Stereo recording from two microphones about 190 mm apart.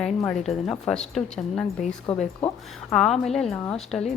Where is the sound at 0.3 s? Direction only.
5° left (ahead or behind).